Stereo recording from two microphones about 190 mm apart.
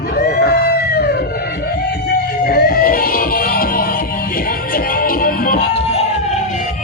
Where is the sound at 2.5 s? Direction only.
55° left (ahead or behind).